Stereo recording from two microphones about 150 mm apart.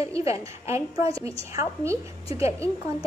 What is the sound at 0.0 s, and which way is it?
A woman's voice, 20° right (ahead or behind).